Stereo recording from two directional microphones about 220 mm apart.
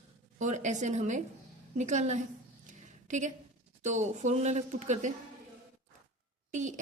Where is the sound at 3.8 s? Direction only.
35° right (ahead or behind).